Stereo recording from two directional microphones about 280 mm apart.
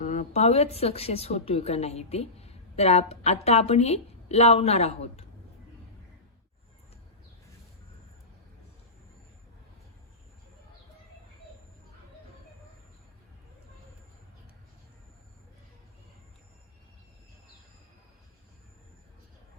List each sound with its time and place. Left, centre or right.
0.0 s a woman's voice: left